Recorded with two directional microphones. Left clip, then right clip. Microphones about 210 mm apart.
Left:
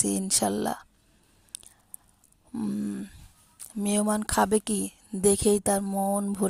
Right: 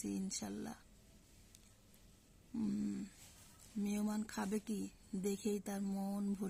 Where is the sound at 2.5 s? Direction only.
35° left (ahead or behind).